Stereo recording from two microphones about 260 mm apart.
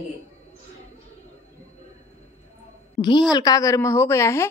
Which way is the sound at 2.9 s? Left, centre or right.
Centre.